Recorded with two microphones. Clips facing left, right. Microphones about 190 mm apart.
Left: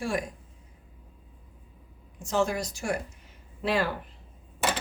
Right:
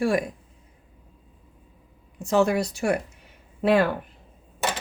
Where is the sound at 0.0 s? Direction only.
65° right (ahead or behind).